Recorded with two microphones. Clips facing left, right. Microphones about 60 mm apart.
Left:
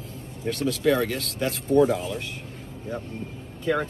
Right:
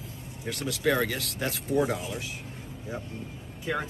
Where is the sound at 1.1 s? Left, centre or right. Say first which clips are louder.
Left 4 dB; left.